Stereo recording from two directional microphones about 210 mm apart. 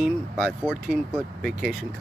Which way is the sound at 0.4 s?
Centre (ahead or behind).